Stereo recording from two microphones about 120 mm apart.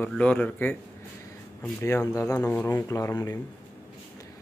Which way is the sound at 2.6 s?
30° left (ahead or behind).